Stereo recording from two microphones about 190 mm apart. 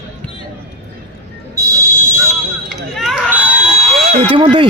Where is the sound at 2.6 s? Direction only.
Centre (ahead or behind).